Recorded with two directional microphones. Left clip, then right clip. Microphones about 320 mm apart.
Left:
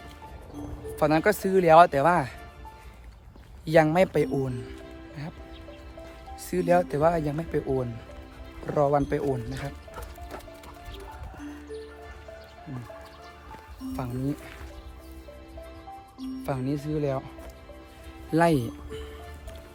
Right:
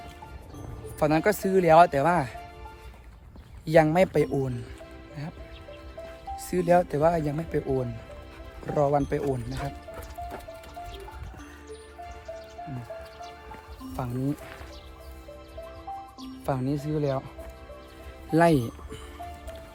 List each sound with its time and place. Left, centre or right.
0.9 s speech: centre
3.7 s speech: centre
6.3 s speech: centre
13.9 s speech: centre
16.4 s speech: centre
18.3 s speech: centre